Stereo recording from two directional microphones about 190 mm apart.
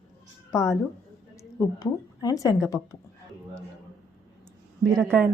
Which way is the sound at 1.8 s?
20° left (ahead or behind).